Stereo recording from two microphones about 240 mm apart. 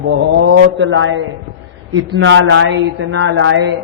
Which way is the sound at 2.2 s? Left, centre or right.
Right.